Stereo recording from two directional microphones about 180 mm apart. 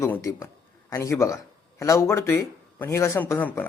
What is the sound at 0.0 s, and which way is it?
Speech, 15° left (ahead or behind).